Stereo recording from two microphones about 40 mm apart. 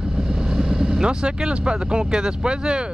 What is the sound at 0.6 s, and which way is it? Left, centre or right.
Speech, centre.